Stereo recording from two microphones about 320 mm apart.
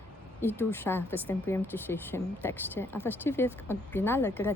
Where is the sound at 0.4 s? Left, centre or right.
Centre.